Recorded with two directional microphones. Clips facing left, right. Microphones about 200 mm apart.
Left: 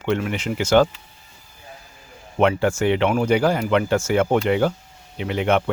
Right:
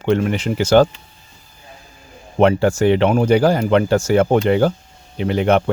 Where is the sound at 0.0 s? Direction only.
35° right (ahead or behind).